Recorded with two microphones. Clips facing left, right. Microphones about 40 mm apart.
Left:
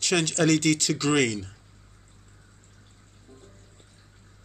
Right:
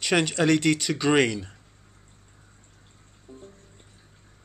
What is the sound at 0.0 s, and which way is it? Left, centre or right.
Speech, centre.